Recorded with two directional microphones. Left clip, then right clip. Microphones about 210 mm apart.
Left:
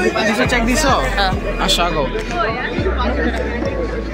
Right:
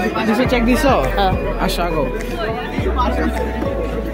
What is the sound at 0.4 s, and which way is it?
Speech, 30° right (ahead or behind).